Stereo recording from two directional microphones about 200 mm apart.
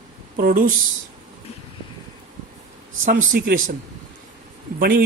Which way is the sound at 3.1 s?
45° right (ahead or behind).